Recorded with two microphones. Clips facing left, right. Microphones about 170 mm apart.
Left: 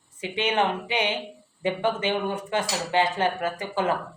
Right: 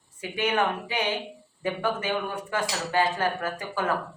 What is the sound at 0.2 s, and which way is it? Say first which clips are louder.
Speech: left 1 dB; 25° left (ahead or behind).